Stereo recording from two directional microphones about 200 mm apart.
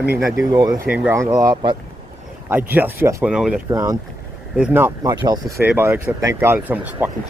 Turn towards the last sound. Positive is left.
turn(degrees=-10)  # may be behind; listen again after turning